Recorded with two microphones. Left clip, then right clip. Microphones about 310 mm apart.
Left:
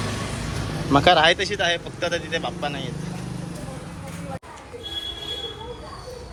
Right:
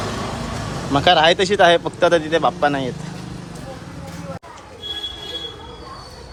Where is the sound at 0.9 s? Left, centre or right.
Centre; by 2.8 s right.